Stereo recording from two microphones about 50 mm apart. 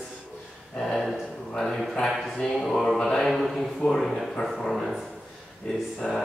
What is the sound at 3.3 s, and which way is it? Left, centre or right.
Speech, centre.